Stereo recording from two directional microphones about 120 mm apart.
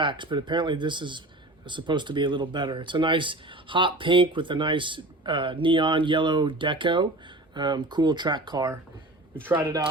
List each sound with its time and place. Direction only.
0.0 s speech: 40° right (ahead or behind)
9.3 s speech: 15° right (ahead or behind)